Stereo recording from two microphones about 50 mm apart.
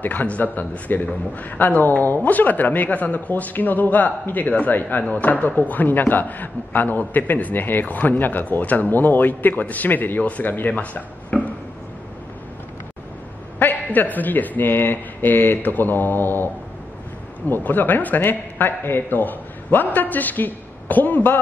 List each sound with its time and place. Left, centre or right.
0.0 s a man's voice: left
10.7 s speech: left
13.6 s a man's voice: left
17.5 s a man's voice: left